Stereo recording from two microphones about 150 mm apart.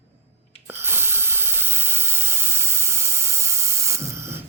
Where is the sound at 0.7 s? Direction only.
15° right (ahead or behind).